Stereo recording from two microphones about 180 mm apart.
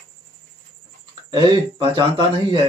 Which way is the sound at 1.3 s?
30° right (ahead or behind).